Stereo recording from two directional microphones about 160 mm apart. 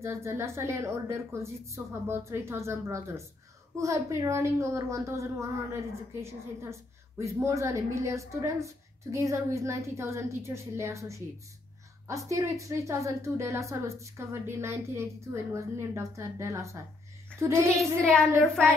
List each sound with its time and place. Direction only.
0.0 s a woman's voice: 15° right (ahead or behind)
17.7 s child singing: 5° left (ahead or behind)